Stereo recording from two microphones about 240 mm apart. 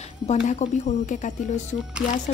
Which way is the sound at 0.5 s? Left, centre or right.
Left.